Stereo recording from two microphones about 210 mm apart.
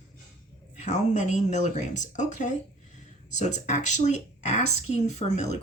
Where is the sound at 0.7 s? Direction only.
35° left (ahead or behind).